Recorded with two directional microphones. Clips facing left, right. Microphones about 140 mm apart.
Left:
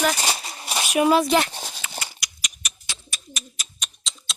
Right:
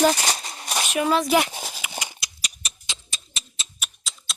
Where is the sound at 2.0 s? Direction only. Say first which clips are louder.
Right 1 dB; 20° right (ahead or behind).